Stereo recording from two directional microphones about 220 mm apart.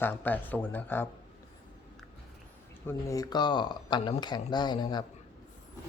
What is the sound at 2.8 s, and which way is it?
Speech, 15° left (ahead or behind).